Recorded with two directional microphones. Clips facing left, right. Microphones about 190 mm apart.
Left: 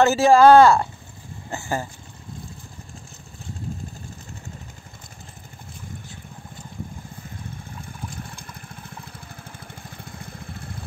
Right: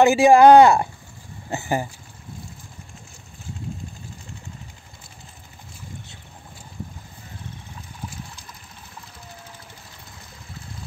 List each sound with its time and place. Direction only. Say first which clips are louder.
0.0 s speech: right 2 dB; 15° right (ahead or behind)